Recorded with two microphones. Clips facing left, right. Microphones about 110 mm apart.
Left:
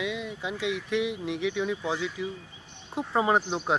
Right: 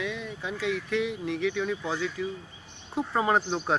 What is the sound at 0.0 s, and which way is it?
Speech, 15° left (ahead or behind).